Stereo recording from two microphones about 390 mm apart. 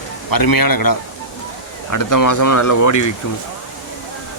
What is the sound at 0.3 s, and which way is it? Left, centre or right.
Speech, left.